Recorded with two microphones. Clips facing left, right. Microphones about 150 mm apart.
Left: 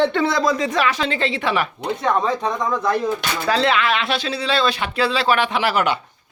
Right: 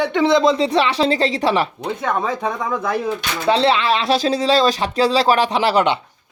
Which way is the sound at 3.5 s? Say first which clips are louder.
Right 3 dB; 30° right (ahead or behind).